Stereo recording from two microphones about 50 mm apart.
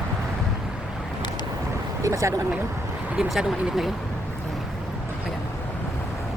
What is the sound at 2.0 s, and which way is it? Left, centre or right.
Speech, right.